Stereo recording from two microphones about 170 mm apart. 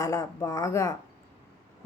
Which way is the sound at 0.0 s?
20° left (ahead or behind).